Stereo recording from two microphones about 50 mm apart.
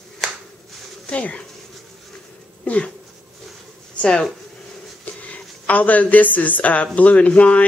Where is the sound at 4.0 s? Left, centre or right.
Left.